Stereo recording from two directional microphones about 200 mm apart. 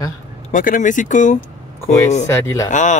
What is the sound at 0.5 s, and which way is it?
Speech, 40° left (ahead or behind).